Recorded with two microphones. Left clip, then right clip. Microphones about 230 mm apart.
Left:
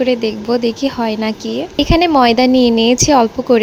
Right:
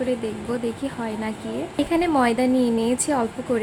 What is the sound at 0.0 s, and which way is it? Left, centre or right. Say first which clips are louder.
Speech: left 10 dB; left.